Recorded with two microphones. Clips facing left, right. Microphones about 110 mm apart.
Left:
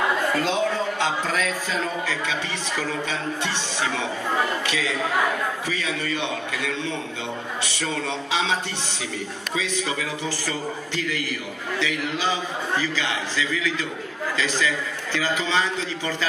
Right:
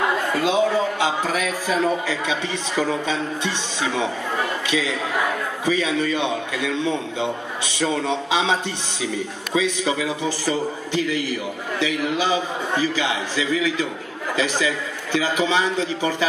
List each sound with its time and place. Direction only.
0.4 s a man's voice: 10° right (ahead or behind)
9.6 s a man's voice: 20° right (ahead or behind)